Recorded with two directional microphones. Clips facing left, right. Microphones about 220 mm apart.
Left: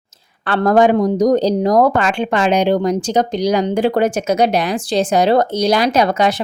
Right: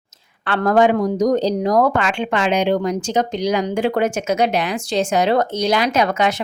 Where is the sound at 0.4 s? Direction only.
40° left (ahead or behind).